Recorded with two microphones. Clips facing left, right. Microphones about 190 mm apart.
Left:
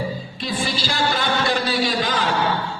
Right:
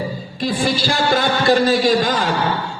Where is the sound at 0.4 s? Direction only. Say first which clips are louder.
Right 6 dB; 50° right (ahead or behind).